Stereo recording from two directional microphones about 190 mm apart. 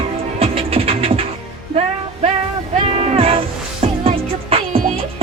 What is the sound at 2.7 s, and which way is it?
Music, 30° right (ahead or behind).